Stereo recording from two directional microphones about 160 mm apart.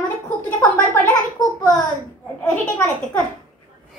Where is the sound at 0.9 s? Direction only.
20° left (ahead or behind).